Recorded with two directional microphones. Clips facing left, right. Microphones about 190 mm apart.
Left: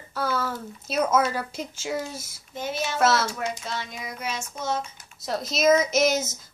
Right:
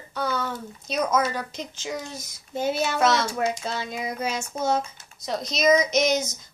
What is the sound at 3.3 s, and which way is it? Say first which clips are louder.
Speech: right 4 dB; 35° right (ahead or behind).